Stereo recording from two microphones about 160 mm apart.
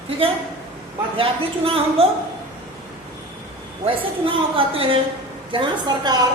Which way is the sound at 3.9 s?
35° right (ahead or behind).